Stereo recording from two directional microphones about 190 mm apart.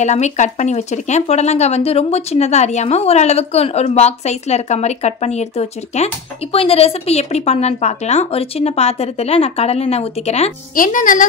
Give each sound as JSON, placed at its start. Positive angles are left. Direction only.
{"t": 0.0, "sound": "speech", "side_deg": 35}
{"t": 10.7, "sound": "speech", "side_deg": 45}